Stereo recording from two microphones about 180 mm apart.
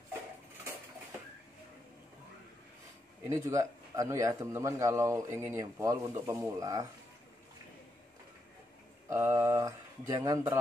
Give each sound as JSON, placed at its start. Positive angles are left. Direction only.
{"t": 3.3, "sound": "a man's voice", "side_deg": -15}
{"t": 9.1, "sound": "a man's voice", "side_deg": -15}